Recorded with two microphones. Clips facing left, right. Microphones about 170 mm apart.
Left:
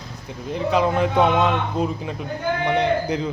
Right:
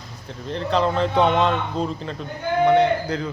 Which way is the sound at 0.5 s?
10° left (ahead or behind).